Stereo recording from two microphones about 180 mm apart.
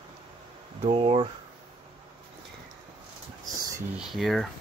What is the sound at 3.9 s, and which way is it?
Speech, centre (ahead or behind).